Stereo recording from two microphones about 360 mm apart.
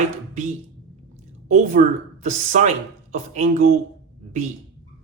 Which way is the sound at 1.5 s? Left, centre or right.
Centre.